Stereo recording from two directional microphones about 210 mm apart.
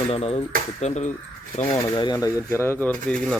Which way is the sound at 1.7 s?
20° left (ahead or behind).